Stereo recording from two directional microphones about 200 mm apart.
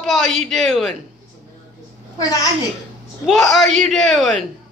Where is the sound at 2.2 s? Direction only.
15° left (ahead or behind).